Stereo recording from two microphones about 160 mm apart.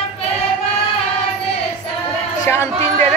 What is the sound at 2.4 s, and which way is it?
Music, 15° left (ahead or behind).